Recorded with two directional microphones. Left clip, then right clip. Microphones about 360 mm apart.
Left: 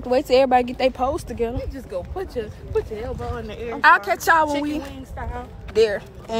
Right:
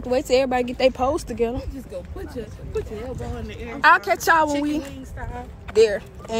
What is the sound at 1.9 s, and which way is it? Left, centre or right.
Speech, centre.